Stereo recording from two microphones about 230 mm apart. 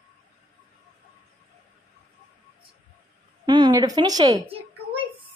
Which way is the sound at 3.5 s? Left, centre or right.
Centre.